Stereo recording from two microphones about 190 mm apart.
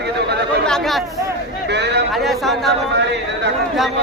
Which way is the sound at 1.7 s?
65° right (ahead or behind).